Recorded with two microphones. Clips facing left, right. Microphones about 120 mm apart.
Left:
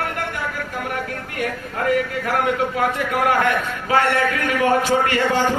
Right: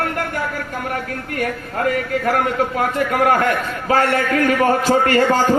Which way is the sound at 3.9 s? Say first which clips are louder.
Right 1 dB; 40° right (ahead or behind).